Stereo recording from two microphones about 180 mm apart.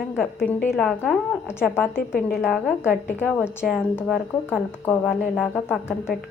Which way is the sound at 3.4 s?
5° right (ahead or behind).